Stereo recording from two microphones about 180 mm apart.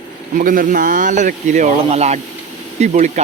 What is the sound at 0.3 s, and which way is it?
Speech, 50° right (ahead or behind).